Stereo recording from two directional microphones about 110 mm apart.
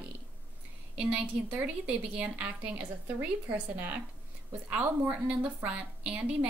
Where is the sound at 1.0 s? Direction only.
10° right (ahead or behind).